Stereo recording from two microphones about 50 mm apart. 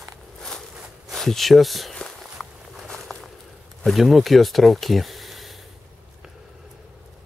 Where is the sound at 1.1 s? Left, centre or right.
Centre.